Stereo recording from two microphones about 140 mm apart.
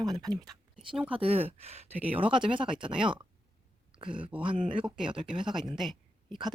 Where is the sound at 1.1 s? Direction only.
45° right (ahead or behind).